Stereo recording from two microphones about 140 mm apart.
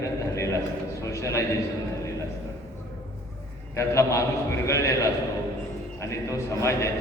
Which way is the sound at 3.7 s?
20° left (ahead or behind).